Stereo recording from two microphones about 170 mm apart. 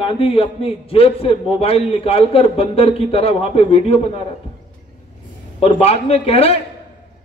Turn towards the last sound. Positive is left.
turn(degrees=35)  # may be behind; listen again after turning